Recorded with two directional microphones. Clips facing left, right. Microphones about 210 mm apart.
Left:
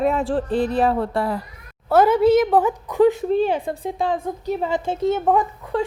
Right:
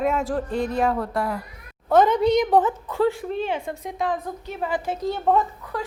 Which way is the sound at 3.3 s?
35° left (ahead or behind).